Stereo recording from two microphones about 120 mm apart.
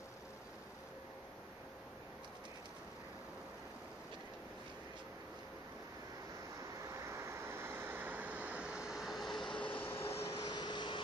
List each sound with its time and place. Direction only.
7.0 s vehicle: 25° right (ahead or behind); by 9.5 s centre (ahead or behind)
9.5 s vehicle: 45° left (ahead or behind)
9.8 s vehicle: 20° left (ahead or behind)
10.5 s vehicle: 40° left (ahead or behind)